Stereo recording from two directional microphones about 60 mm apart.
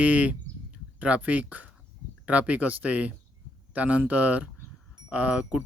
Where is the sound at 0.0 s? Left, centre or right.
Right.